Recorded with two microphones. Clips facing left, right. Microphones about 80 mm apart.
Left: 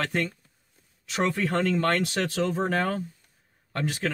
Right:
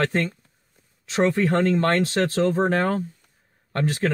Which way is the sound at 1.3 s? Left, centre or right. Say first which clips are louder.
Right 5 dB; right.